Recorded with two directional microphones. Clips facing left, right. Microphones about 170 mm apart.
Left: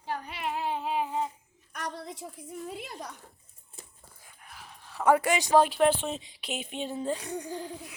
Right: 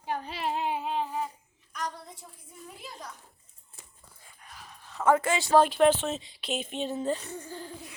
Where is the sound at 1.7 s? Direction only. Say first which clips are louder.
Even; 70° left (ahead or behind).